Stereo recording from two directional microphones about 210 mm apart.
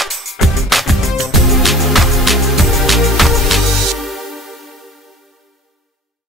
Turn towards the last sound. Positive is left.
turn(degrees=0)  # may be behind; listen again after turning